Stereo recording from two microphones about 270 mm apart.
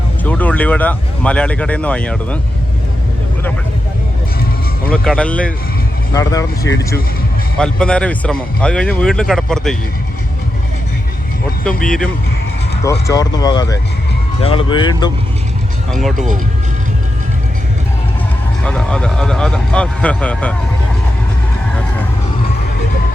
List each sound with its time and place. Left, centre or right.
0.3 s speech: centre
4.9 s speech: centre
11.7 s speech: left
12.8 s speech: centre
15.9 s speech: centre
18.6 s speech: centre